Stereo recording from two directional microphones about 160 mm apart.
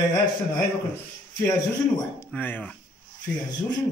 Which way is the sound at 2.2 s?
10° left (ahead or behind).